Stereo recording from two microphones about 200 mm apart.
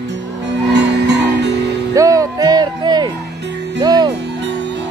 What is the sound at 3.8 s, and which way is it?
Music, 20° right (ahead or behind).